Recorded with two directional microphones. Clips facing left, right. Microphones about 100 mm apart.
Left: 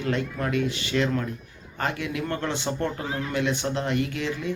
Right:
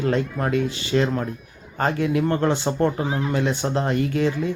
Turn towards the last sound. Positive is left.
turn(degrees=-35)  # may be behind; listen again after turning